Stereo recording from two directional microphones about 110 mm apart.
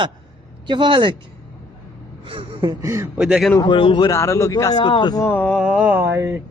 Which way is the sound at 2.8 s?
25° right (ahead or behind).